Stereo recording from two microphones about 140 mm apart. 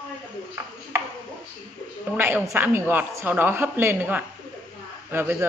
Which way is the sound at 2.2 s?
15° right (ahead or behind).